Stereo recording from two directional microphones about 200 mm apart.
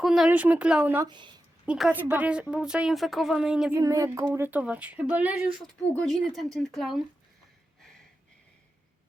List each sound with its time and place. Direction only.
0.0 s speech: centre (ahead or behind)
1.0 s speech: 25° right (ahead or behind)
1.6 s a woman's voice: 5° right (ahead or behind)
3.8 s speech: 15° right (ahead or behind)
5.9 s a woman's voice: 5° left (ahead or behind)